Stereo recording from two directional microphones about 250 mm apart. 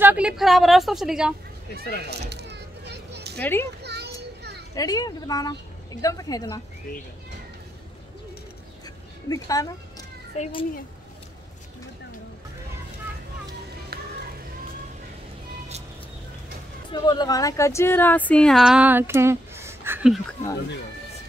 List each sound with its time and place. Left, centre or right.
0.0 s speech: centre
2.0 s children playing: right
3.3 s a woman's voice: centre
3.8 s children playing: right
4.7 s a woman's voice: centre
6.9 s speech: left
8.8 s a sound: centre
10.3 s speech: left
16.9 s speech: centre